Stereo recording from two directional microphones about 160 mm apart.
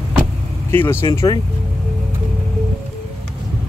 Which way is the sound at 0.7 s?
15° left (ahead or behind).